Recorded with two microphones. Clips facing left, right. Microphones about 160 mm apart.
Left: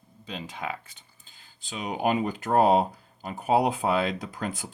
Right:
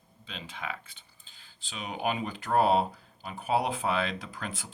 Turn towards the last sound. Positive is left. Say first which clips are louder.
# left 5 dB
turn(degrees=40)  # may be behind; listen again after turning